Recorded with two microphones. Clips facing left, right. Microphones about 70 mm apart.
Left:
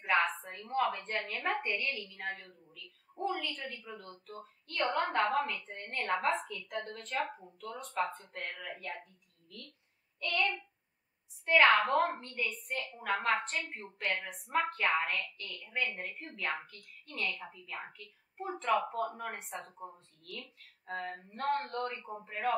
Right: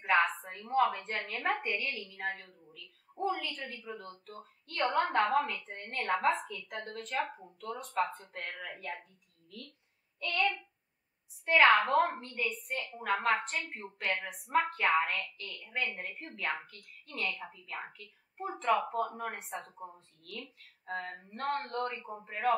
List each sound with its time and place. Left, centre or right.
0.0 s a woman's voice: centre
10.2 s child singing: centre
11.4 s a woman's voice: centre
12.7 s a woman's voice: centre
13.0 s a woman's voice: centre